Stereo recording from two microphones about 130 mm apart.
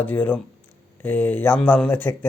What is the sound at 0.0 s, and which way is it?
Speech, 10° left (ahead or behind).